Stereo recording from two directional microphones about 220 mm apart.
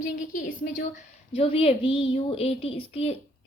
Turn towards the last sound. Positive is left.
turn(degrees=25)  # may be behind; listen again after turning